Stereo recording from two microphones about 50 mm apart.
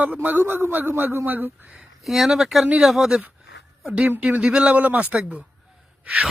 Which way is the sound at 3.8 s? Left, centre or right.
Right.